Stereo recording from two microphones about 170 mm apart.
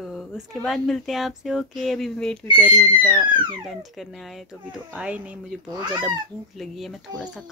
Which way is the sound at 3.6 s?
Centre (ahead or behind).